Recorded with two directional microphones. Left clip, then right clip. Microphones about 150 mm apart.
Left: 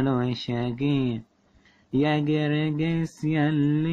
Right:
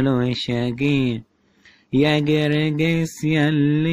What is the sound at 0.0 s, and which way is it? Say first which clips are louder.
Speech: right 5 dB; 15° right (ahead or behind).